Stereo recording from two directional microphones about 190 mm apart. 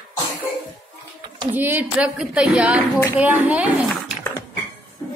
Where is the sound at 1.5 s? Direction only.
10° right (ahead or behind).